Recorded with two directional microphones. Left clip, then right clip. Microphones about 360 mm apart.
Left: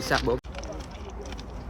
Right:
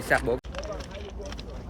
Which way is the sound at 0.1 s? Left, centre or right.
Centre.